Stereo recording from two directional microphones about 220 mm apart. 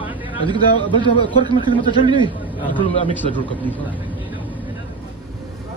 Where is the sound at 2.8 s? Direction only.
25° left (ahead or behind).